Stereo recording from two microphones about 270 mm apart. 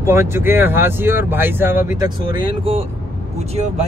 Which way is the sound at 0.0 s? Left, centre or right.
Centre.